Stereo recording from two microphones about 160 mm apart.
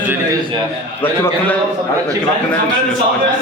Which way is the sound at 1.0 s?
15° left (ahead or behind).